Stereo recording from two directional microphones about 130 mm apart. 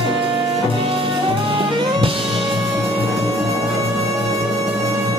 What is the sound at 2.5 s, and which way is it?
Music, 45° right (ahead or behind).